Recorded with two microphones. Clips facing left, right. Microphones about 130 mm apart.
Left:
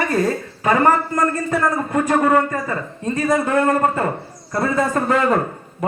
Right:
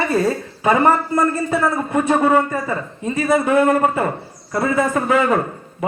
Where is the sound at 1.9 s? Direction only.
20° right (ahead or behind).